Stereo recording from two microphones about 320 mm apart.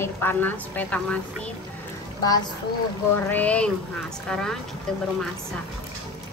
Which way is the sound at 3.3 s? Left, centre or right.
Centre.